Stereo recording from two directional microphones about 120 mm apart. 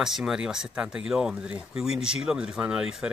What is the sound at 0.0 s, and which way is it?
Speech, 5° right (ahead or behind).